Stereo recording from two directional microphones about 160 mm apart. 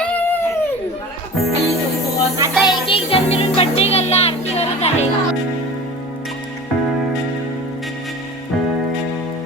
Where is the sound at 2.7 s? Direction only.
35° left (ahead or behind).